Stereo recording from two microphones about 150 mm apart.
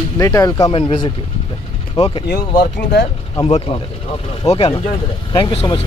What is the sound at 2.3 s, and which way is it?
Speech, 90° left.